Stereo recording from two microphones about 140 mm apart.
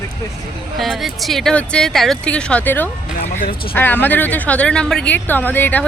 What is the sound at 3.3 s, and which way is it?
Speech, 75° left (ahead or behind).